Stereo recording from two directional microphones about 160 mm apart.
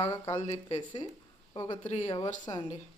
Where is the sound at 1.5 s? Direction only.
25° left (ahead or behind).